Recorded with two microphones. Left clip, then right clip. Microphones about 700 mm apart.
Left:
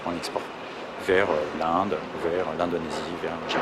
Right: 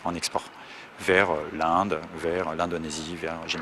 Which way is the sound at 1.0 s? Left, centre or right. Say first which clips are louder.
Even; right.